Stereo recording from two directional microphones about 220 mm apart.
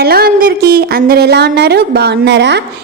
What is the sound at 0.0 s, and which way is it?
A woman's voice, 45° right (ahead or behind).